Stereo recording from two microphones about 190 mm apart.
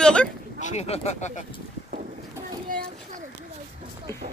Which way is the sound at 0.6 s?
35° left (ahead or behind).